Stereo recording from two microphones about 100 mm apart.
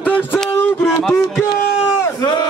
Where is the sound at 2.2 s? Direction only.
45° left (ahead or behind).